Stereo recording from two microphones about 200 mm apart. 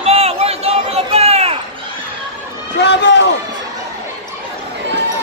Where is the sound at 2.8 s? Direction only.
60° left (ahead or behind).